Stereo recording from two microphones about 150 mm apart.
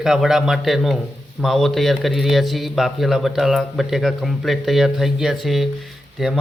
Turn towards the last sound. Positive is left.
turn(degrees=0)  # may be behind; listen again after turning